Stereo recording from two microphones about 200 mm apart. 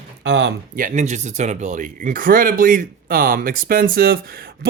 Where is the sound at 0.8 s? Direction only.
40° right (ahead or behind).